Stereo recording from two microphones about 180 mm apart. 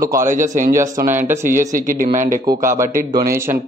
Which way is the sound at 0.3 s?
45° right (ahead or behind).